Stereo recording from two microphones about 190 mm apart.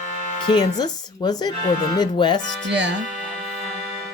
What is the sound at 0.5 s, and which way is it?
Speech, 20° left (ahead or behind).